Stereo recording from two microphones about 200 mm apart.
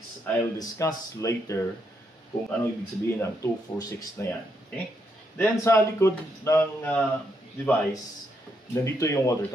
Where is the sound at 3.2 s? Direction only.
15° left (ahead or behind).